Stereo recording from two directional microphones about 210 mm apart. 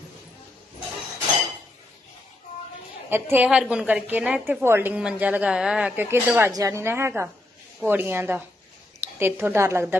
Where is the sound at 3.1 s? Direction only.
10° right (ahead or behind).